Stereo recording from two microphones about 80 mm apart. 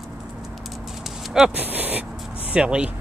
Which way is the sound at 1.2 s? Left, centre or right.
Centre.